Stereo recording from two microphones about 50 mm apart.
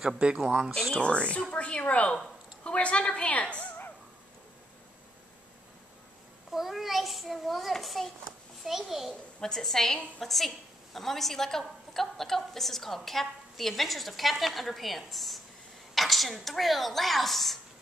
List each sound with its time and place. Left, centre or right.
0.2 s speech: right
0.9 s a woman's voice: left
6.5 s a woman's voice: centre
9.4 s a woman's voice: centre
10.2 s a woman's voice: centre